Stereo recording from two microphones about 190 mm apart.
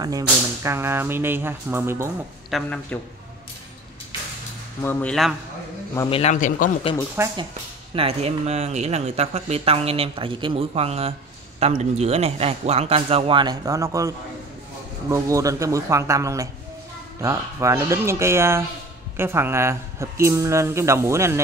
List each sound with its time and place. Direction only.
0.0 s speech: 15° right (ahead or behind)
2.5 s a man's voice: 5° left (ahead or behind)
4.8 s a man's voice: 5° left (ahead or behind)
6.0 s a man's voice: 30° left (ahead or behind)
6.3 s speech: 45° left (ahead or behind)
7.2 s speech: 15° right (ahead or behind)
7.9 s speech: 30° right (ahead or behind); by 21.4 s 15° right (ahead or behind)